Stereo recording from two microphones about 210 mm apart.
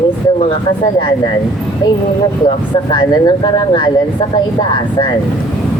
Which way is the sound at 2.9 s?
20° left (ahead or behind).